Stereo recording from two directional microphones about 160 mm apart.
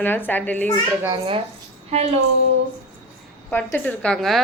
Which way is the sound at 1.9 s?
40° right (ahead or behind).